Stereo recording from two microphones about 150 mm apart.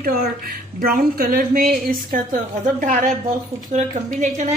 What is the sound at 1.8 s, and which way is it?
A woman's voice, 60° right (ahead or behind).